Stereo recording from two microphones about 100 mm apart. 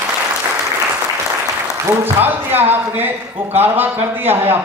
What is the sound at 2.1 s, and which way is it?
A man's voice, 20° right (ahead or behind).